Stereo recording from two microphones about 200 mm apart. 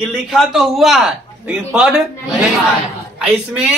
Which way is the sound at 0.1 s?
Centre (ahead or behind).